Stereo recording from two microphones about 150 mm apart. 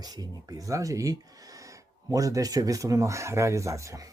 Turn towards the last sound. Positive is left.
turn(degrees=-20)  # may be behind; listen again after turning